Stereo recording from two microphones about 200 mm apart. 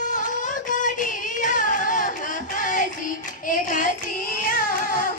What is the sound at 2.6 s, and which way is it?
Music, 40° left (ahead or behind).